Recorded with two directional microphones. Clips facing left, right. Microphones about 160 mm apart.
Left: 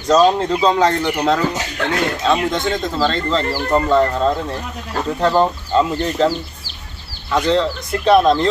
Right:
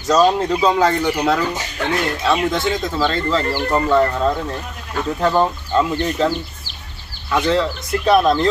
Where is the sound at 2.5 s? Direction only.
5° right (ahead or behind).